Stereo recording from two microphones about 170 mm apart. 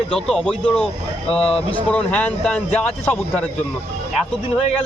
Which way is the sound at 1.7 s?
10° left (ahead or behind).